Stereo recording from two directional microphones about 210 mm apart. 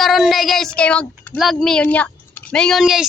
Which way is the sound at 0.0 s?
Centre (ahead or behind).